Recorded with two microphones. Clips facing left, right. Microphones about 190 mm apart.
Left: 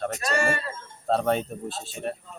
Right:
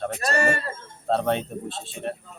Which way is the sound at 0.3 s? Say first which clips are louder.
Right 2 dB; 45° right (ahead or behind).